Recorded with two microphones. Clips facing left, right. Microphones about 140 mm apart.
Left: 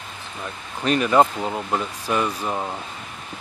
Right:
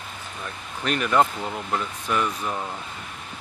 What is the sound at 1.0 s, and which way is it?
Speech, 20° left (ahead or behind).